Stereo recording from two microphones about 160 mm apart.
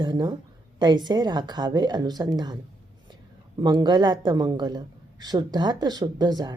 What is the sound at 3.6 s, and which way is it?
A woman's voice, 25° right (ahead or behind).